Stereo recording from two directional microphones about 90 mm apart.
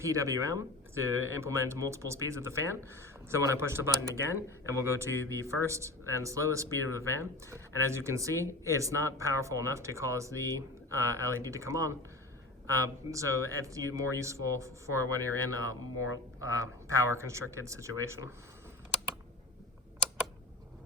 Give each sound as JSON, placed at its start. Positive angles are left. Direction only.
{"t": 0.0, "sound": "speech", "side_deg": -35}
{"t": 17.1, "sound": "speech", "side_deg": -30}